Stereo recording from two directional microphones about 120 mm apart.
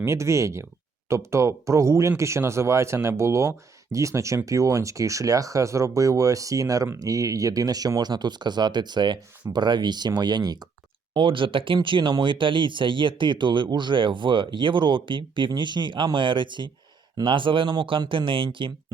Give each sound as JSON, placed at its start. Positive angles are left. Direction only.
{"t": 0.0, "sound": "speech", "side_deg": -25}